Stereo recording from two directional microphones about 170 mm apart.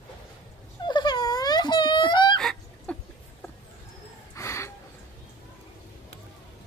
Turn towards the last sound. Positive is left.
turn(degrees=15)  # may be behind; listen again after turning